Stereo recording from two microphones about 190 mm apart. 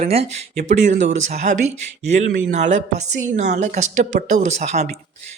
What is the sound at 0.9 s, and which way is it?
Speech, 75° right (ahead or behind).